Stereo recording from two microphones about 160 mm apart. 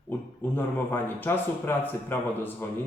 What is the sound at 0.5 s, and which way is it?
A man's voice, 10° left (ahead or behind).